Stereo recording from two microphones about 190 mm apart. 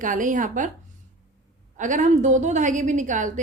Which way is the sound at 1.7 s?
40° right (ahead or behind).